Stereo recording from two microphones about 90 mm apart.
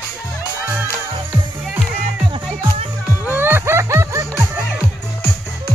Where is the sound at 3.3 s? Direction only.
25° right (ahead or behind).